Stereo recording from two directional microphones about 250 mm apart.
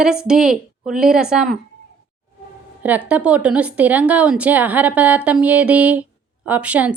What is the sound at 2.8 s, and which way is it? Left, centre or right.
A woman's voice, centre.